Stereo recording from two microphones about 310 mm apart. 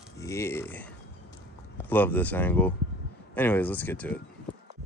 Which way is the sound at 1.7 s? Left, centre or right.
Centre.